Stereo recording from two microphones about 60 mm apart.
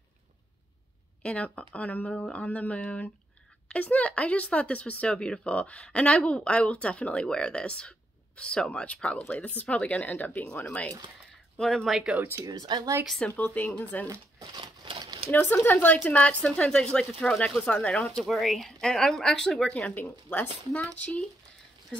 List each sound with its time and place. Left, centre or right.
1.2 s speech: left
11.5 s speech: centre
12.4 s speech: right
13.3 s speech: left
15.3 s speech: left; by 17.7 s centre
18.0 s speech: centre
19.7 s speech: left